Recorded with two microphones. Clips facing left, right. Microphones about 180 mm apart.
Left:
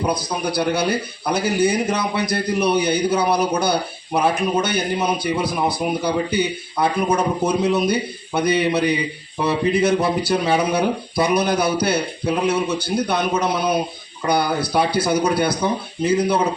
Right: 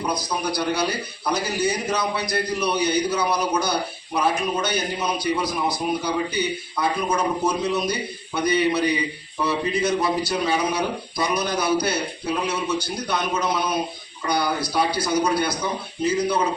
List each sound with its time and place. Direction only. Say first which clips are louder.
0.0 s a man's voice: left 3 dB; 55° left (ahead or behind)